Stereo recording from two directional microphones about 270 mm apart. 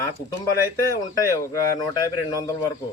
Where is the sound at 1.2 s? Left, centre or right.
Centre.